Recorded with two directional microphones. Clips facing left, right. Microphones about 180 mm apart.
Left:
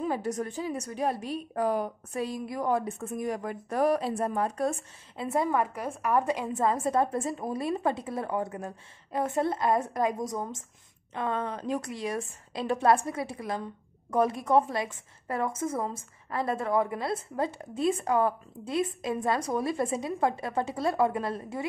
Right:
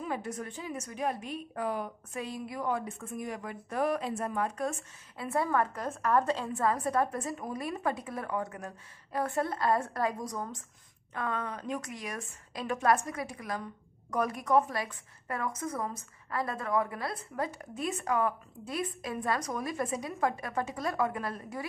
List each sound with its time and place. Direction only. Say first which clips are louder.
0.0 s a woman's voice: left 6 dB; 35° left (ahead or behind)
5.1 s a woman's voice: left 2 dB; 20° left (ahead or behind)